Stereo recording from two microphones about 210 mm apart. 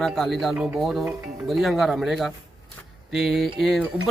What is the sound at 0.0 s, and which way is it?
Speech, centre (ahead or behind).